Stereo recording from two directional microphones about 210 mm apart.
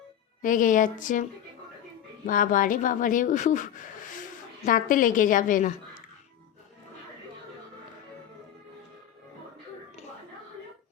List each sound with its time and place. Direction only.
0.4 s a woman's voice: 40° left (ahead or behind)